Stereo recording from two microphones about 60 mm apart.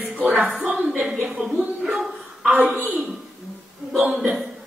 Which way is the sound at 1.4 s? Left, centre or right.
Centre.